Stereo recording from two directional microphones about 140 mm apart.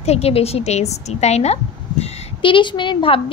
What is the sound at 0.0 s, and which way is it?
A woman's voice, 50° left (ahead or behind).